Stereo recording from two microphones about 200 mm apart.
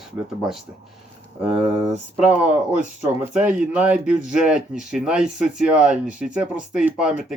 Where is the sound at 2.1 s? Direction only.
5° right (ahead or behind).